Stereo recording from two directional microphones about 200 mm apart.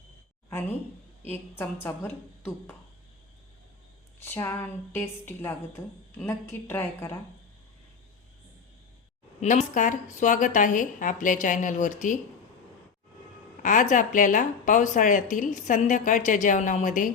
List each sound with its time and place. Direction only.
1.3 s a woman's voice: 10° left (ahead or behind)
4.2 s a woman's voice: 10° left (ahead or behind)
9.4 s a woman's voice: 40° left (ahead or behind)
13.6 s a woman's voice: 40° left (ahead or behind)